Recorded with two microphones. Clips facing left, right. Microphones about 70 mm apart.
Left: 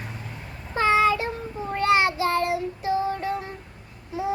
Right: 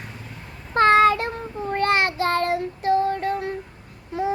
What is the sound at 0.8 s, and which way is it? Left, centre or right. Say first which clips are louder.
Child singing: right 4 dB; right.